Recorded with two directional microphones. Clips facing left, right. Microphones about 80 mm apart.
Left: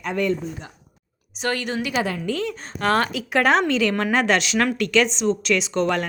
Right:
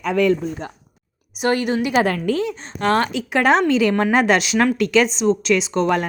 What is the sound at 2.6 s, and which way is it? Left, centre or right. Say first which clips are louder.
Speech: right 2 dB; centre.